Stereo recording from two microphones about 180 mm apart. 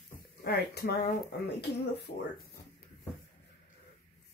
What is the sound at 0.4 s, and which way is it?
Speech, 65° left (ahead or behind).